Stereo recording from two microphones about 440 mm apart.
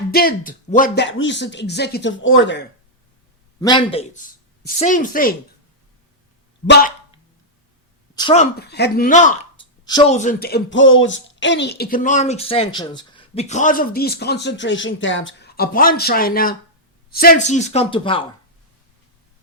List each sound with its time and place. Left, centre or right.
0.1 s speech: centre
3.6 s speech: centre
6.7 s dog: centre
8.1 s speech: centre